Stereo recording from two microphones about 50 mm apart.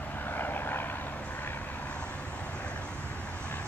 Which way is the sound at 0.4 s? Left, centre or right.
Left.